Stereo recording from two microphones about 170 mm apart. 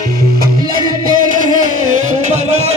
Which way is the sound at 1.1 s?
50° right (ahead or behind).